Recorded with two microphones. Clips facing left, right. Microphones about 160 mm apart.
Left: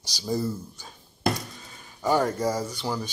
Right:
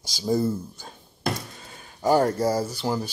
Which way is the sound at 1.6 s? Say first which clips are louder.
Right 4 dB; 55° right (ahead or behind).